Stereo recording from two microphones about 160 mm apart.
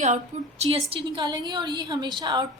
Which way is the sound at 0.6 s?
35° right (ahead or behind).